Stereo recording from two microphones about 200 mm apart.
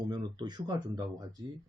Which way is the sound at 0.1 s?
20° right (ahead or behind).